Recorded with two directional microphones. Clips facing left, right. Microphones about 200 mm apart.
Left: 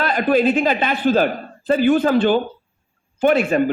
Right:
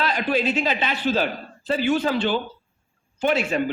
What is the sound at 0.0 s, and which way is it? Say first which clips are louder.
A man's voice: left 6 dB; 50° left (ahead or behind).